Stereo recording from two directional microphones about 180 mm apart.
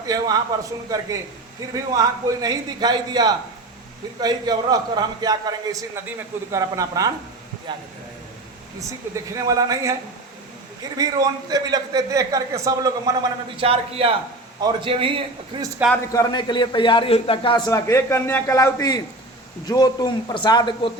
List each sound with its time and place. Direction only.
0.0 s a man's voice: 20° right (ahead or behind)
9.1 s a man's voice: 20° right (ahead or behind)
10.9 s a man's voice: 20° right (ahead or behind)
13.6 s a man's voice: 30° right (ahead or behind)
16.1 s a man's voice: 20° left (ahead or behind)
17.7 s a man's voice: 15° left (ahead or behind)